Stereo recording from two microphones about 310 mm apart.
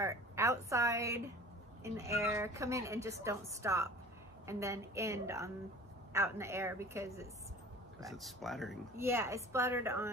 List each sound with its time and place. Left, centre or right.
0.0 s a woman's voice: centre